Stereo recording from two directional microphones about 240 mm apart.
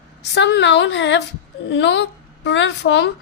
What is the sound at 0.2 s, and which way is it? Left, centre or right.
A woman's voice, left.